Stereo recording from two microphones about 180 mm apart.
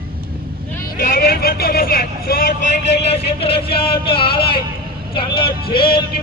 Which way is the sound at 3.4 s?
30° left (ahead or behind).